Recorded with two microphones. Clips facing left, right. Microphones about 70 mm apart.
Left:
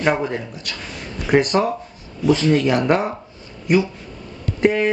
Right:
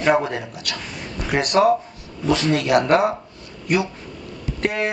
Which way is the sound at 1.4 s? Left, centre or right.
Right.